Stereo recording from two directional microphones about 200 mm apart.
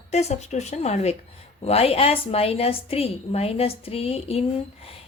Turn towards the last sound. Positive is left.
turn(degrees=30)  # may be behind; listen again after turning